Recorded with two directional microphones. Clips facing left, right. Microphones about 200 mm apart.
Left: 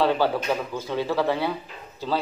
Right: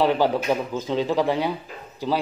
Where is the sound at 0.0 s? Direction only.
15° right (ahead or behind).